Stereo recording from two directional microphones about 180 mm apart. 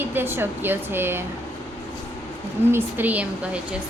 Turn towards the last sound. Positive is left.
turn(degrees=-10)  # may be behind; listen again after turning